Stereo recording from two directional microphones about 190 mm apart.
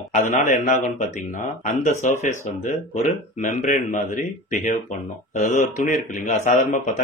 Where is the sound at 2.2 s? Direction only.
40° left (ahead or behind).